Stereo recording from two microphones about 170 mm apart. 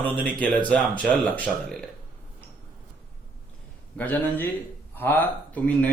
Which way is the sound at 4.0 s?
10° left (ahead or behind).